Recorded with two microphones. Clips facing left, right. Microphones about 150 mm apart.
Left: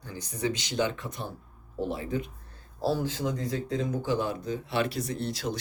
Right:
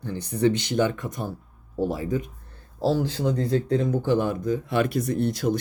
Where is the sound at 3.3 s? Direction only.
65° right (ahead or behind).